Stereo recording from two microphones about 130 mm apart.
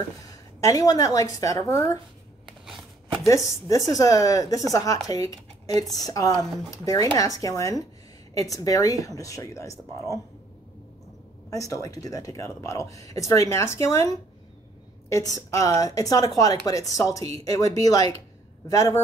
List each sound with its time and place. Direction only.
0.6 s a woman's voice: 25° left (ahead or behind)
3.4 s a woman's voice: 25° left (ahead or behind)
11.5 s a woman's voice: 25° left (ahead or behind)